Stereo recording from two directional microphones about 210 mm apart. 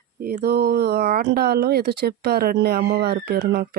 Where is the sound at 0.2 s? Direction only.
45° right (ahead or behind).